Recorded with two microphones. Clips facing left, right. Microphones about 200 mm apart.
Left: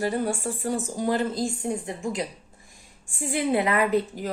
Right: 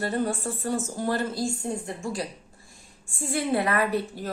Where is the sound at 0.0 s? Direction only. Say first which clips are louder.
Left 1 dB; 10° left (ahead or behind).